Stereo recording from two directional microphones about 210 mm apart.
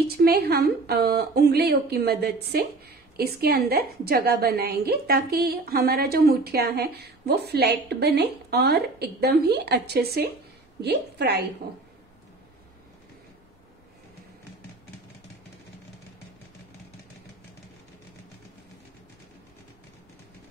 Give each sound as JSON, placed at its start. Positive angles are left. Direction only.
{"t": 0.2, "sound": "a woman's voice", "side_deg": -45}